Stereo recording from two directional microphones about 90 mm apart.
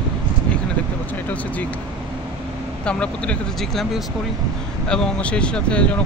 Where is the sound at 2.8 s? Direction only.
10° left (ahead or behind).